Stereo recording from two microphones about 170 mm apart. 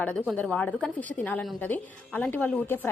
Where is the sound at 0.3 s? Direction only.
10° left (ahead or behind).